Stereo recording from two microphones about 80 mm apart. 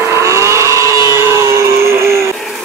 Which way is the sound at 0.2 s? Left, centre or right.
Right.